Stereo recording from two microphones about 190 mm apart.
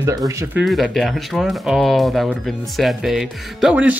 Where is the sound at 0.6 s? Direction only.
Centre (ahead or behind).